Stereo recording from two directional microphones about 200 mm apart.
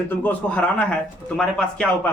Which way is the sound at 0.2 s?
10° left (ahead or behind).